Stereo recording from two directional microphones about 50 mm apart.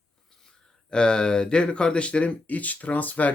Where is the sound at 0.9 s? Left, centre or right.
Centre.